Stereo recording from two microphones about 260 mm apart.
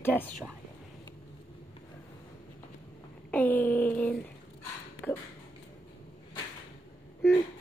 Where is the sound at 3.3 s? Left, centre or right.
Centre.